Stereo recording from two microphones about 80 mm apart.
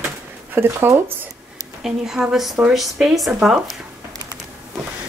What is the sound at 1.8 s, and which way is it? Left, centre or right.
A woman's voice, centre.